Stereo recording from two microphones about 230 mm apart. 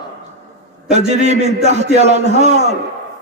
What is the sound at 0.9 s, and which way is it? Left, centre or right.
A man's voice, right.